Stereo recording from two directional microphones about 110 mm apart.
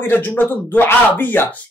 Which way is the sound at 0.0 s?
20° left (ahead or behind).